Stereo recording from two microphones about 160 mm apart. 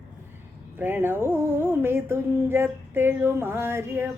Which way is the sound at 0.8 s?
10° right (ahead or behind).